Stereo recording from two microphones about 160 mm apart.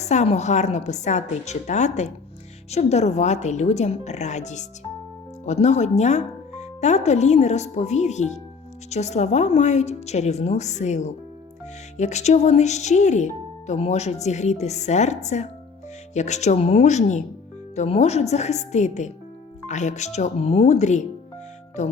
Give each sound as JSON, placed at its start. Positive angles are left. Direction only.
{"t": 0.0, "sound": "speech", "side_deg": 45}